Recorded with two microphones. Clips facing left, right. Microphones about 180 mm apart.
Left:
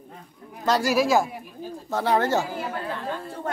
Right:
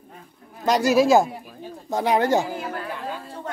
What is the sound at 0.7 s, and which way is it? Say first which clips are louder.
Speech: right 4 dB; 20° right (ahead or behind).